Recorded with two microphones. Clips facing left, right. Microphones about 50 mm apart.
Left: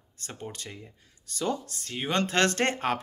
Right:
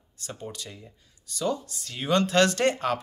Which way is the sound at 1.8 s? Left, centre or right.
Left.